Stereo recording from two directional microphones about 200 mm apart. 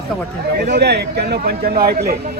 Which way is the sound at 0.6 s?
55° right (ahead or behind).